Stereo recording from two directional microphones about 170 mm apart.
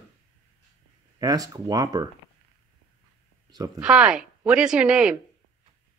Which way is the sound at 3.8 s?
5° right (ahead or behind).